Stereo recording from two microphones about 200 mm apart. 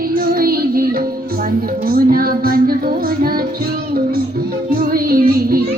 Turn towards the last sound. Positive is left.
turn(degrees=-50)  # may be behind; listen again after turning